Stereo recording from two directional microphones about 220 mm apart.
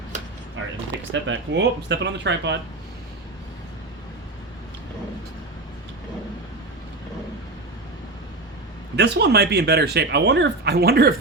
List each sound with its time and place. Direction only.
1.1 s speech: 55° right (ahead or behind)
9.0 s speech: 50° right (ahead or behind)